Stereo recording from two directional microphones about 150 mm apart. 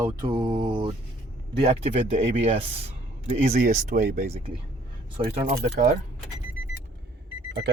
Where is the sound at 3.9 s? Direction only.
55° right (ahead or behind).